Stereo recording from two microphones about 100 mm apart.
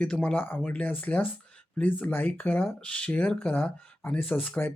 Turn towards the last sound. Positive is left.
turn(degrees=10)  # may be behind; listen again after turning